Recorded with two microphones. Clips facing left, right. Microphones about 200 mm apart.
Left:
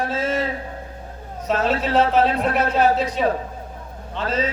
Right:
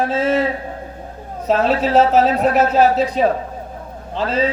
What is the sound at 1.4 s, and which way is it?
Speech, 35° right (ahead or behind).